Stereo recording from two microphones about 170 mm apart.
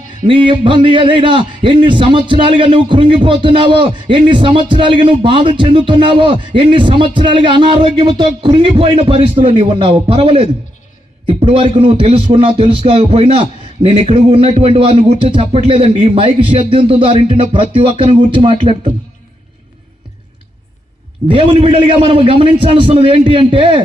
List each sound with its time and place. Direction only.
0.3 s a man's voice: 30° right (ahead or behind)
21.2 s speech: 35° right (ahead or behind)